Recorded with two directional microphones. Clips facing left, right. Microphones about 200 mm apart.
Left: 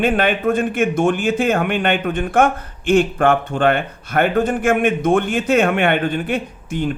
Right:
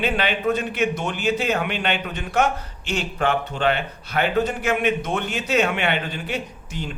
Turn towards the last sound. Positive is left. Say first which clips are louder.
# left 10 dB
turn(degrees=55)  # may be behind; listen again after turning